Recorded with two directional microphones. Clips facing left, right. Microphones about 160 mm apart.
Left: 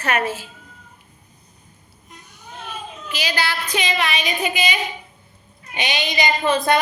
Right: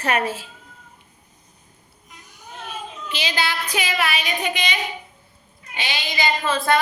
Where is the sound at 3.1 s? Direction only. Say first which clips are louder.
Left 1 dB; 20° right (ahead or behind); by 4.8 s 5° left (ahead or behind).